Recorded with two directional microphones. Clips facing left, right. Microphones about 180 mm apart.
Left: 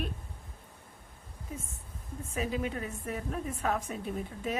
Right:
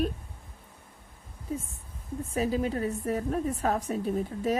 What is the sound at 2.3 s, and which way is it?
A woman's voice, 35° right (ahead or behind).